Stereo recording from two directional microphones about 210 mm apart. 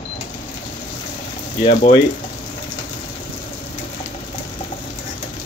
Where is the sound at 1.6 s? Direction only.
25° left (ahead or behind).